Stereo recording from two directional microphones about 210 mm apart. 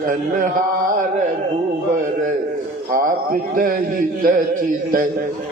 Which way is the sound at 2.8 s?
40° right (ahead or behind).